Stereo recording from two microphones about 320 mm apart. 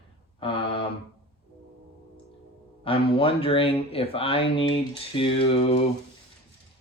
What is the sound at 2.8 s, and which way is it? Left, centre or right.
Speech, centre.